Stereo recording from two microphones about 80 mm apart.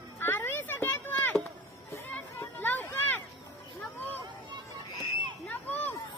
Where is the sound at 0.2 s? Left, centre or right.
Left.